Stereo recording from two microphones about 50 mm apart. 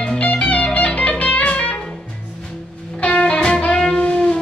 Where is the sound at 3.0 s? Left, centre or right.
Left.